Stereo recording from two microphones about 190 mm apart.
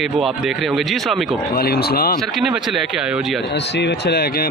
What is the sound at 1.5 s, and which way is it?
Speech, 55° left (ahead or behind).